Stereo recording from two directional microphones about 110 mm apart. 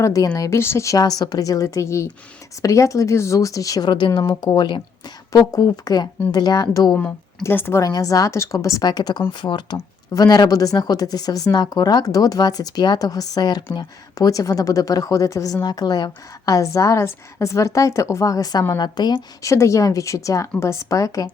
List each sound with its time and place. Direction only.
0.0 s a woman's voice: 30° left (ahead or behind)
5.3 s speech: 35° left (ahead or behind)
6.9 s speech: 10° left (ahead or behind)
7.4 s a woman's voice: 20° left (ahead or behind)
7.8 s speech: 30° left (ahead or behind)
19.5 s a woman's voice: 25° left (ahead or behind)